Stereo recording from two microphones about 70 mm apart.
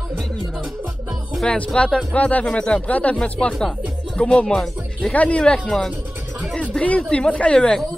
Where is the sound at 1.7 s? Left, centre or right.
Centre.